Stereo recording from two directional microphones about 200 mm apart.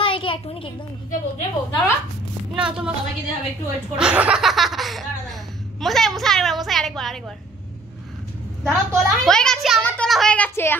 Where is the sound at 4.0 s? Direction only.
5° right (ahead or behind).